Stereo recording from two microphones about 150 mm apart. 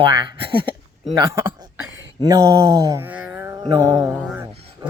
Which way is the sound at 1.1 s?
20° right (ahead or behind).